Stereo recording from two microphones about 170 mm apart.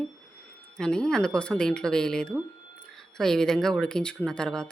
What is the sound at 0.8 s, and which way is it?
Speech, 5° left (ahead or behind).